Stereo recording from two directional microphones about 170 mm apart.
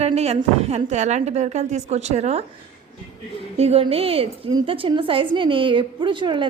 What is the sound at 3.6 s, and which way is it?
A woman's voice, 35° right (ahead or behind).